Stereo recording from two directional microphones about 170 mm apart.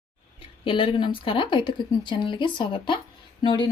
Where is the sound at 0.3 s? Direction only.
30° left (ahead or behind).